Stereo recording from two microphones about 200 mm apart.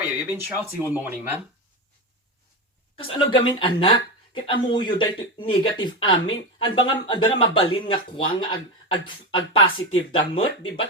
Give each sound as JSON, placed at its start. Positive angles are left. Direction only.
{"t": 0.3, "sound": "speech", "side_deg": -10}
{"t": 3.0, "sound": "speech", "side_deg": 25}